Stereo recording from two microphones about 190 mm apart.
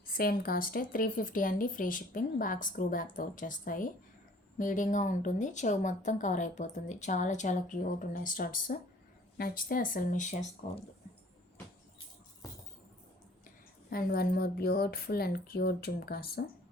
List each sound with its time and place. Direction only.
0.0 s speech: 50° left (ahead or behind)
13.9 s speech: 55° left (ahead or behind)